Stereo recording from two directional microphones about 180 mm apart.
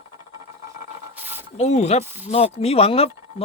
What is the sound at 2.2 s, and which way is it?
Speech, 35° left (ahead or behind).